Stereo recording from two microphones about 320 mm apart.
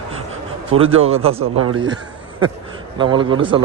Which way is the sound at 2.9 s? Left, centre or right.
Centre.